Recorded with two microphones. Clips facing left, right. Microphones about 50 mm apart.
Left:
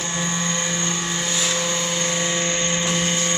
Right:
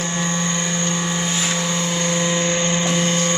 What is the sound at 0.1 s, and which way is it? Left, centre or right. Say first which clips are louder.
Vehicle: even; centre.